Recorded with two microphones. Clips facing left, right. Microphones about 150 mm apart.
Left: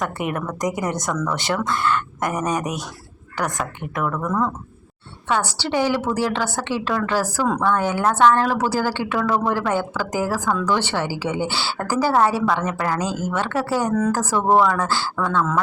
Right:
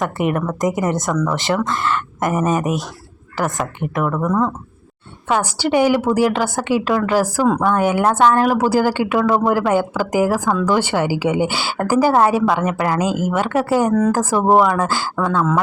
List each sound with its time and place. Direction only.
0.0 s speech: centre (ahead or behind)
1.1 s a woman's voice: 20° right (ahead or behind)
1.4 s speech: centre (ahead or behind)
4.1 s a woman's voice: 20° right (ahead or behind)